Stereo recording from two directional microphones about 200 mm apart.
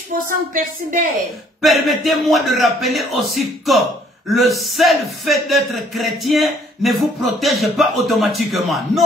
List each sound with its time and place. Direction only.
0.3 s speech: 45° right (ahead or behind)
1.6 s speech: centre (ahead or behind)